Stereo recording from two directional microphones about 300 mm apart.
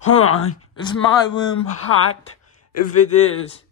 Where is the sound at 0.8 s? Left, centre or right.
Centre.